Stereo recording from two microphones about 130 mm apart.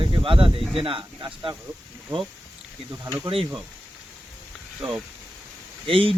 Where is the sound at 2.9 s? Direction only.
25° right (ahead or behind).